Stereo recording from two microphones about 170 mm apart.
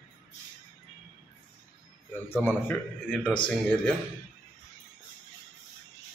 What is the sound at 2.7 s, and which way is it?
Speech, 5° left (ahead or behind).